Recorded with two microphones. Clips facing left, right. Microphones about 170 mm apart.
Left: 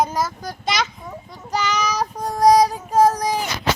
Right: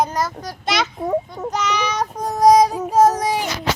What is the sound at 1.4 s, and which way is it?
Child singing, centre (ahead or behind).